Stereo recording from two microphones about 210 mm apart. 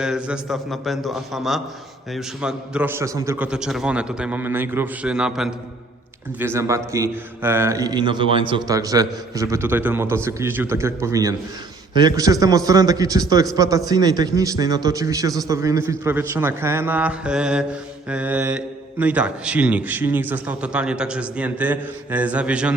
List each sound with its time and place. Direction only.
0.0 s a man's voice: 5° right (ahead or behind)